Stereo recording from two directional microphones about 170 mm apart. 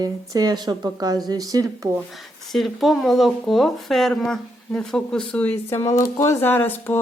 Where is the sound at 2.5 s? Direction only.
Centre (ahead or behind).